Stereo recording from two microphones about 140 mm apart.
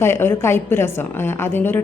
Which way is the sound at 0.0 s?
15° left (ahead or behind).